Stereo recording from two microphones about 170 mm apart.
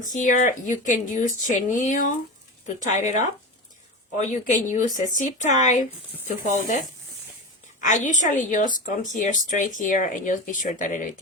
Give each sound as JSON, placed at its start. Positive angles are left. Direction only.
{"t": 0.0, "sound": "speech", "side_deg": 50}
{"t": 7.9, "sound": "speech", "side_deg": 45}